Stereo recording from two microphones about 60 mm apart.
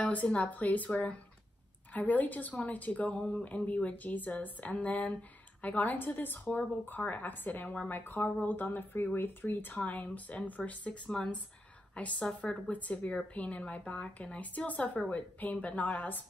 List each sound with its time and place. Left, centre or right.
0.0 s a woman's voice: left
11.1 s a woman's voice: centre